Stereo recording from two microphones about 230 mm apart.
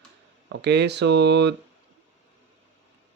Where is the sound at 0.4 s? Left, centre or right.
Right.